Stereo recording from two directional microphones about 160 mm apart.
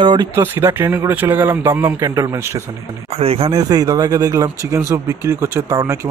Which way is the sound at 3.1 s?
40° right (ahead or behind).